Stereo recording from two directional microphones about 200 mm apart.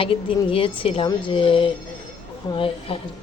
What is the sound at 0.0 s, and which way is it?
A woman's voice, 25° left (ahead or behind).